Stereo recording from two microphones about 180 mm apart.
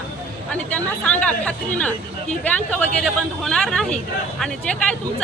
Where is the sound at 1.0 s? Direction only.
5° left (ahead or behind).